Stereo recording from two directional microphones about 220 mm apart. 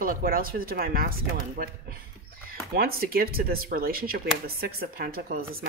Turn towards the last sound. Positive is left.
turn(degrees=-45)  # may be behind; listen again after turning